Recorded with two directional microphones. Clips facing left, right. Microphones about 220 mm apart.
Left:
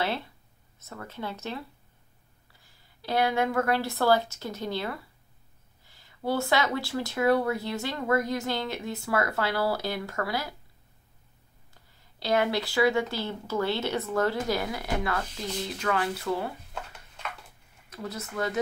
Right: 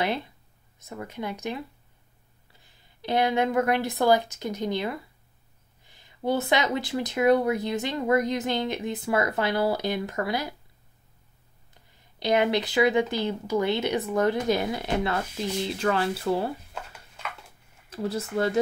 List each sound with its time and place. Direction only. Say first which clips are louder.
0.0 s speech: right 3 dB; 15° right (ahead or behind)
2.6 s speech: right 4 dB; 20° right (ahead or behind)
12.2 s speech: right 3 dB; 15° right (ahead or behind)
17.8 s speech: right 7 dB; 30° right (ahead or behind)